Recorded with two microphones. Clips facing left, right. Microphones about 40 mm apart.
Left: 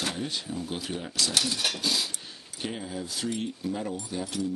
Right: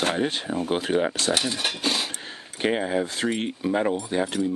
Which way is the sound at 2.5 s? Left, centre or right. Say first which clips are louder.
Right 11 dB; right.